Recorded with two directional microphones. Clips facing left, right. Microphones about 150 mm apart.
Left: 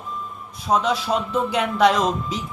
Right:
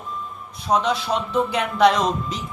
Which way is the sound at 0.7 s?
Centre (ahead or behind).